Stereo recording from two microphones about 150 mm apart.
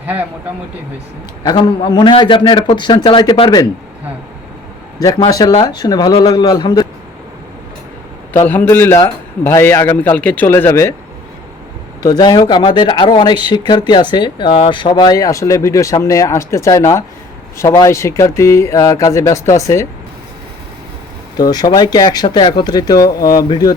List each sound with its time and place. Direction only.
0.0 s speech: 10° right (ahead or behind)
1.5 s a man's voice: 30° left (ahead or behind)
4.9 s a man's voice: 25° left (ahead or behind)
8.3 s a man's voice: 15° left (ahead or behind)
12.0 s speech: 25° left (ahead or behind)
21.3 s speech: 25° left (ahead or behind)